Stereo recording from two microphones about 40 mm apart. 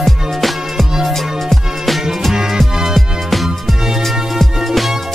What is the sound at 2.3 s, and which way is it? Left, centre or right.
Music, centre.